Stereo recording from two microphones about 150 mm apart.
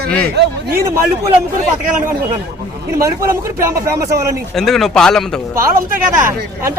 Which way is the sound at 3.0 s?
20° right (ahead or behind).